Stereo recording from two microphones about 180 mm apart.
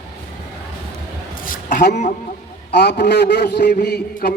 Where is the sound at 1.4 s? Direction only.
50° left (ahead or behind).